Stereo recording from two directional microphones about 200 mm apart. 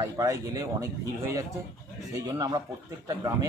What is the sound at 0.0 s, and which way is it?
Speech, 15° right (ahead or behind).